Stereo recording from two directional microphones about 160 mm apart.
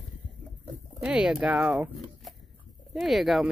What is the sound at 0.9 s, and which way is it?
Speech, 5° right (ahead or behind).